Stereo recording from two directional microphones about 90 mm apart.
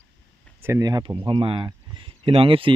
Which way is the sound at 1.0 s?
70° right (ahead or behind).